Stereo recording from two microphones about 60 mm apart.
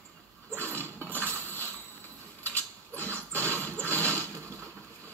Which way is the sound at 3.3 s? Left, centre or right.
Left.